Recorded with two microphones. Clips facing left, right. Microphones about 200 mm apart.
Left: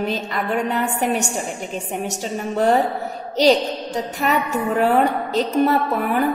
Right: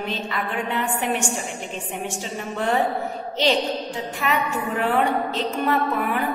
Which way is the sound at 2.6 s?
40° left (ahead or behind).